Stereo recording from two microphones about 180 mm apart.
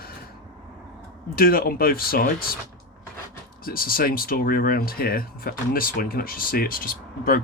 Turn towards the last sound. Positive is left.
turn(degrees=55)  # may be behind; listen again after turning